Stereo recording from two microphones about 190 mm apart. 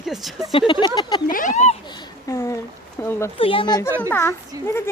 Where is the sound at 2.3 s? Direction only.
15° left (ahead or behind).